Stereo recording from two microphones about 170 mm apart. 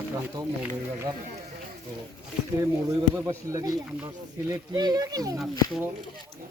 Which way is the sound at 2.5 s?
20° right (ahead or behind).